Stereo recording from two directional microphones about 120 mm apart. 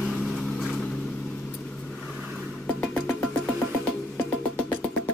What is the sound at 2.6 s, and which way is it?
Music, 10° left (ahead or behind).